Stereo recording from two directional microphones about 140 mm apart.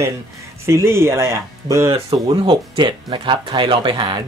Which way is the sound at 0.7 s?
20° right (ahead or behind).